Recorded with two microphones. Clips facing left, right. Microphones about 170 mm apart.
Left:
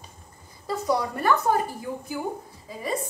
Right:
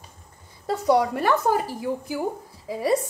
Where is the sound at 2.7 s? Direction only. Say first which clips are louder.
Right 8 dB; 80° right.